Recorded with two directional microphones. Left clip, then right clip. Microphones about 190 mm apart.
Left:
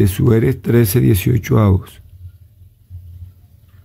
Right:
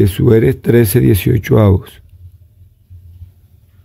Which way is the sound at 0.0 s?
10° right (ahead or behind).